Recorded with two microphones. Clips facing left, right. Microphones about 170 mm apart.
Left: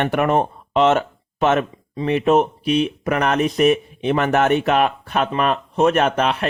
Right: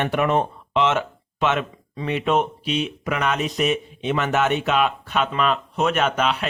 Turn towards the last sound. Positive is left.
turn(degrees=55)  # may be behind; listen again after turning